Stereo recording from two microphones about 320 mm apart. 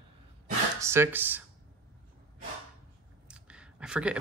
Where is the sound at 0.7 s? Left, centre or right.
Centre.